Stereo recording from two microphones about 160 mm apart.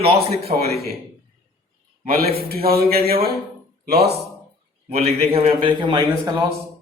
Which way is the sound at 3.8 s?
85° right.